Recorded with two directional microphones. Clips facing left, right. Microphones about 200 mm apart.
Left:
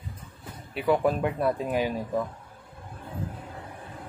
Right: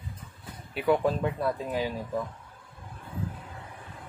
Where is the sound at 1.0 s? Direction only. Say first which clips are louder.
Left 2 dB; 15° left (ahead or behind).